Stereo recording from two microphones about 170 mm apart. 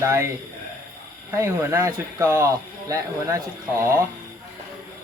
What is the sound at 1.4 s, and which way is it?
A man's voice, 15° right (ahead or behind).